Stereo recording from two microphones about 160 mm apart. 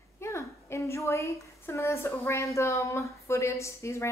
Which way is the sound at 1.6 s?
15° left (ahead or behind).